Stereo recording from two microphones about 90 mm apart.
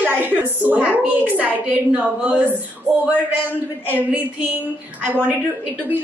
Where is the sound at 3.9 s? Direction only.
20° right (ahead or behind).